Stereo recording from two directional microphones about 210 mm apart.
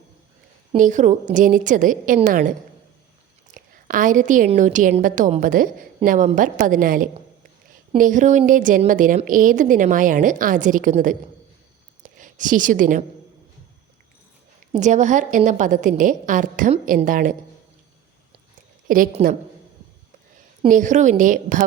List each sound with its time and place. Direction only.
0.7 s a woman's voice: 35° right (ahead or behind)
14.7 s a woman's voice: 35° right (ahead or behind)
18.9 s a woman's voice: 40° right (ahead or behind)
20.7 s a woman's voice: 35° right (ahead or behind)